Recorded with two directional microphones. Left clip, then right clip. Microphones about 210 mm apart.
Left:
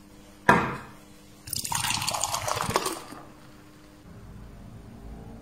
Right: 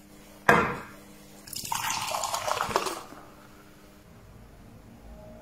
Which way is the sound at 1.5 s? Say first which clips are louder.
Left 2 dB; 20° left (ahead or behind).